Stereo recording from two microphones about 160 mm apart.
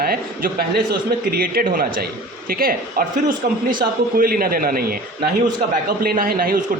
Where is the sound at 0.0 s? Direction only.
65° right (ahead or behind).